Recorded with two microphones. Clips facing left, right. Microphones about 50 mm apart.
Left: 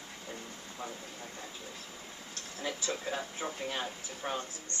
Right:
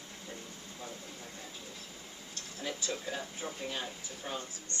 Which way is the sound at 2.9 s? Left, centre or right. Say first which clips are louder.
Left 2 dB; left.